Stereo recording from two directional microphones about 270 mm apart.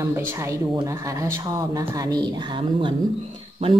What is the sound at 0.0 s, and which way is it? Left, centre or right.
Speech, centre.